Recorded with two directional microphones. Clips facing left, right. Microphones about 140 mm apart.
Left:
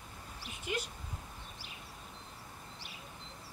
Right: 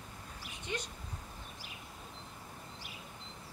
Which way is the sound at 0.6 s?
5° left (ahead or behind).